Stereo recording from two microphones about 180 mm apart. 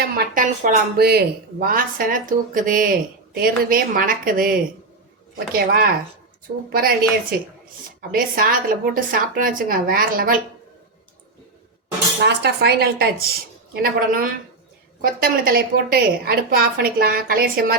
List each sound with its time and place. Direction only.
0.2 s a woman's voice: 50° right (ahead or behind)
5.5 s a woman's voice: 55° right (ahead or behind)
12.2 s a woman's voice: 65° right (ahead or behind)